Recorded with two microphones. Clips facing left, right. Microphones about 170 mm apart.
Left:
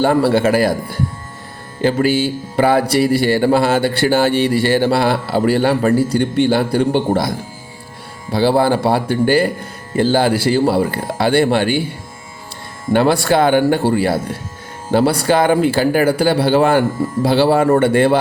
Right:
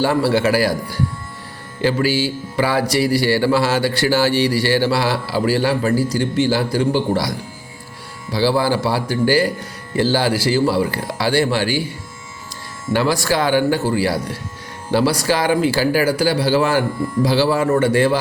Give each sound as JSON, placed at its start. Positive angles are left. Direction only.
{"t": 0.0, "sound": "a man's voice", "side_deg": 55}
{"t": 5.9, "sound": "speech", "side_deg": 25}
{"t": 6.1, "sound": "a man's voice", "side_deg": 60}